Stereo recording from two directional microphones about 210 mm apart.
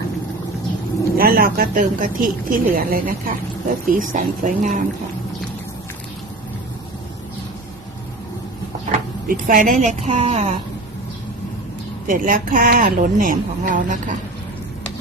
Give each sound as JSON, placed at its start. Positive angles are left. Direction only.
{"t": 1.1, "sound": "speech", "side_deg": -45}
{"t": 9.2, "sound": "speech", "side_deg": -45}
{"t": 12.0, "sound": "speech", "side_deg": -40}